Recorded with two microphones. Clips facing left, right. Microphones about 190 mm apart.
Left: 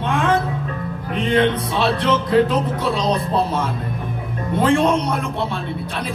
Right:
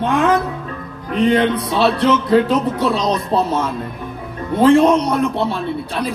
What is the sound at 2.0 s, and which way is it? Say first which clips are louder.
Speech: right 1 dB; 30° left (ahead or behind).